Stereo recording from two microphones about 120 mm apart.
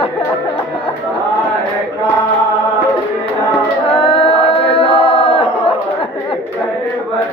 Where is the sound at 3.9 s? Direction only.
50° left (ahead or behind).